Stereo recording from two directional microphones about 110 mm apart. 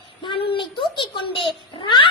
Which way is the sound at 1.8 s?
45° left (ahead or behind).